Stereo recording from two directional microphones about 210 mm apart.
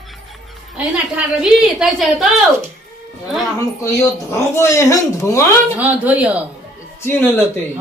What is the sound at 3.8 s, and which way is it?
Speech, 15° left (ahead or behind).